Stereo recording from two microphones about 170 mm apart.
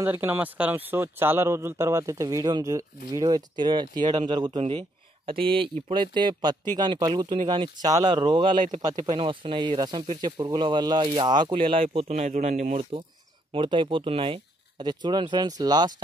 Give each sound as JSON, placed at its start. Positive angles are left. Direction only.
{"t": 0.0, "sound": "a man's voice", "side_deg": -15}
{"t": 13.5, "sound": "a man's voice", "side_deg": -30}